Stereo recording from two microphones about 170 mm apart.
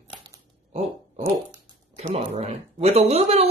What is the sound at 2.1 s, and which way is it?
Speech, 40° right (ahead or behind).